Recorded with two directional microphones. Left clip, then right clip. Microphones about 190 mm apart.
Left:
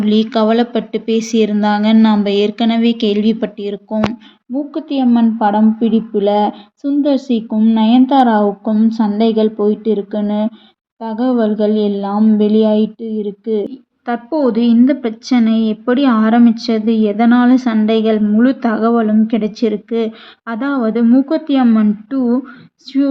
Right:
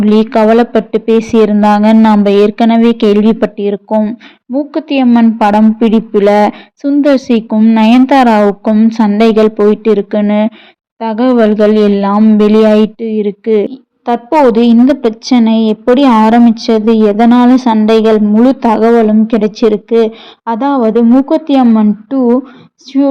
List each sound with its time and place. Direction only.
0.0 s a woman's voice: 40° right (ahead or behind)
14.0 s a woman's voice: 20° right (ahead or behind)
22.9 s a sound: 15° right (ahead or behind)